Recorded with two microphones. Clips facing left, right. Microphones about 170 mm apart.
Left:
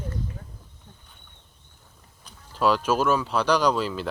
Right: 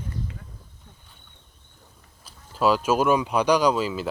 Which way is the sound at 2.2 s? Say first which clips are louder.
Right 1 dB; 10° right (ahead or behind).